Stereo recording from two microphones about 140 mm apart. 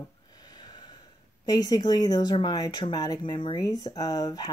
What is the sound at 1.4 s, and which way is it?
Speech, 25° left (ahead or behind).